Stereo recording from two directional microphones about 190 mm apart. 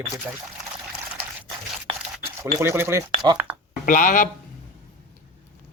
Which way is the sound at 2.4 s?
15° right (ahead or behind).